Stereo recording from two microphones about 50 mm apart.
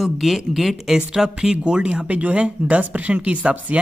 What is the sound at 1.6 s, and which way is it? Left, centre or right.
Speech, right.